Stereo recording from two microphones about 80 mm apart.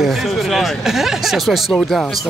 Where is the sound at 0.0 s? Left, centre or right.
Centre.